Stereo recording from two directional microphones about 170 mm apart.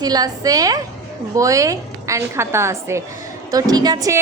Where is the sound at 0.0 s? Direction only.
20° right (ahead or behind).